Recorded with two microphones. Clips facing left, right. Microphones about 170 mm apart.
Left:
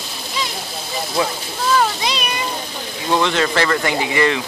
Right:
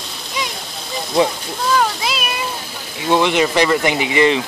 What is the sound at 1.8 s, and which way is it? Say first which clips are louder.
Speech: even; centre (ahead or behind).